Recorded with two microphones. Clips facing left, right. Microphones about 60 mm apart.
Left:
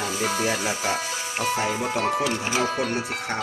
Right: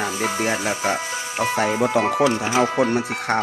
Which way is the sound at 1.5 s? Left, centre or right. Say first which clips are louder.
Right 6 dB; right.